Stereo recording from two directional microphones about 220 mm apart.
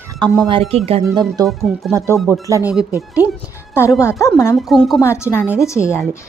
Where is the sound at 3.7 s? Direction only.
10° left (ahead or behind).